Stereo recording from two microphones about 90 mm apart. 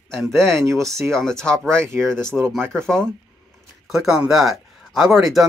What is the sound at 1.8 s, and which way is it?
Speech, 30° right (ahead or behind).